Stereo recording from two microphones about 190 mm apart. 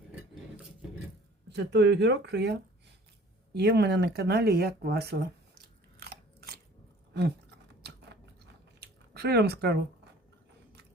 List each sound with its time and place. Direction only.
1.5 s speech: 65° right (ahead or behind)
6.0 s biting: 55° right (ahead or behind)
7.8 s chewing: 60° right (ahead or behind)